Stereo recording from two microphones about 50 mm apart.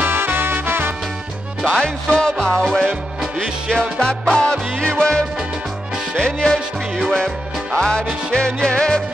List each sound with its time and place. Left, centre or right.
0.0 s music: right
1.6 s music: centre
3.2 s music: centre
3.7 s music: centre
7.7 s music: centre